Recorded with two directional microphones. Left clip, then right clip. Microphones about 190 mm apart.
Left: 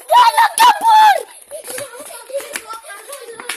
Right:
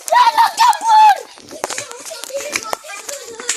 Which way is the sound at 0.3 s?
45° left (ahead or behind).